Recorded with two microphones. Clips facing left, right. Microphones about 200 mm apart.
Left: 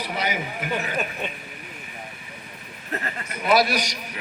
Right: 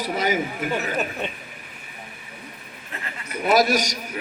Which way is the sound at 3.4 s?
45° right (ahead or behind).